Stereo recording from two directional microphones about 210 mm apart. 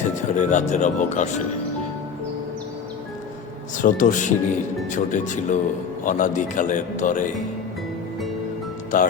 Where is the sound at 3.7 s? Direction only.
40° left (ahead or behind).